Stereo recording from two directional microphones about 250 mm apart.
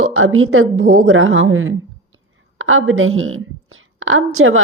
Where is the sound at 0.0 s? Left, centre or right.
Right.